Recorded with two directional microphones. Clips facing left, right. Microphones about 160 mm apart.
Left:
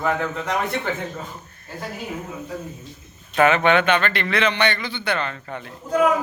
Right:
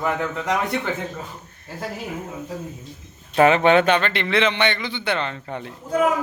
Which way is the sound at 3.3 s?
30° right (ahead or behind).